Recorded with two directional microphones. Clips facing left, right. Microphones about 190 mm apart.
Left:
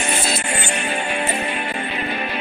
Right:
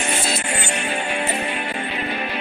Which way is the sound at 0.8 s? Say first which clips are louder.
Left 1 dB; 50° left (ahead or behind).